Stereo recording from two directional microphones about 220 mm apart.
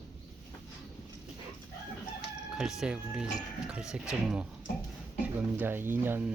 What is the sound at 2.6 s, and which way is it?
Speech, centre (ahead or behind).